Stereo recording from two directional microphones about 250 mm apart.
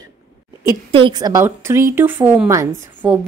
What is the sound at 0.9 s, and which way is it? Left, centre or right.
A woman's voice, centre.